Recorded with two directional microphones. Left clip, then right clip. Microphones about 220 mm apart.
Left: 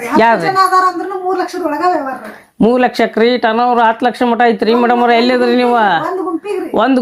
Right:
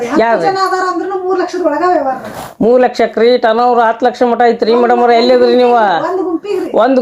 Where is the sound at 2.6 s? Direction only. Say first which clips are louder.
Right 2 dB; 45° left (ahead or behind).